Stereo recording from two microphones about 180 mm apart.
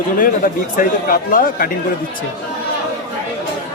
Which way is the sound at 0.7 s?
50° left (ahead or behind).